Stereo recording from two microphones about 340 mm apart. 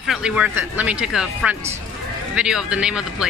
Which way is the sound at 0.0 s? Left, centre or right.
Centre.